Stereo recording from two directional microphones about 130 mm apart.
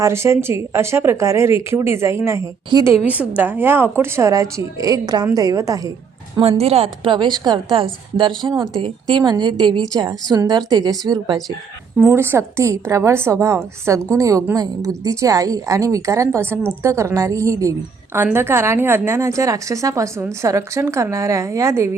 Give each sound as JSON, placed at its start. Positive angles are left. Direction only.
{"t": 0.0, "sound": "a woman's voice", "side_deg": -20}
{"t": 2.7, "sound": "a woman's voice", "side_deg": -35}
{"t": 3.1, "sound": "a woman's voice", "side_deg": -10}
{"t": 6.6, "sound": "a woman's voice", "side_deg": -50}
{"t": 11.9, "sound": "a woman's voice", "side_deg": -20}